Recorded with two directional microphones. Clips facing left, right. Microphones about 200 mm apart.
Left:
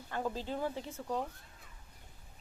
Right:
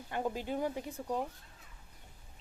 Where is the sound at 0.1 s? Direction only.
20° right (ahead or behind).